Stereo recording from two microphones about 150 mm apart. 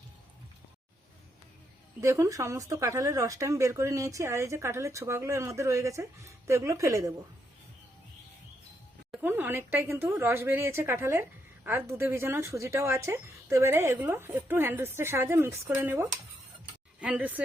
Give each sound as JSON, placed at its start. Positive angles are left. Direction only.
{"t": 2.0, "sound": "speech", "side_deg": -20}
{"t": 9.1, "sound": "a woman's voice", "side_deg": -15}